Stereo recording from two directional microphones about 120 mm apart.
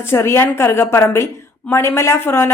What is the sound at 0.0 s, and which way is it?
A woman's voice, 20° left (ahead or behind).